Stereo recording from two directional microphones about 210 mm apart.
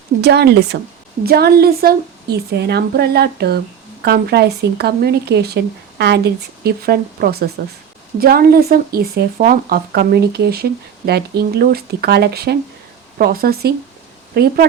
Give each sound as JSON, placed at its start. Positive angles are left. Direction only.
{"t": 0.2, "sound": "speech", "side_deg": -50}